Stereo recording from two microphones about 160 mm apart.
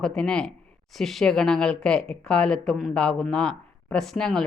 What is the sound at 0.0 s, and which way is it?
Speech, 5° left (ahead or behind).